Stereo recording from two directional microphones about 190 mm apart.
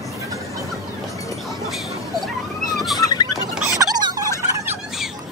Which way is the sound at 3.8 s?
15° right (ahead or behind).